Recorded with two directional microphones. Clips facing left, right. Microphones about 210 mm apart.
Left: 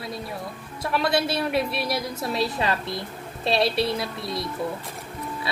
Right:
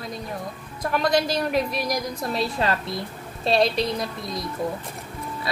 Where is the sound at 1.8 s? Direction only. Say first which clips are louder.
Right 1 dB; 5° left (ahead or behind).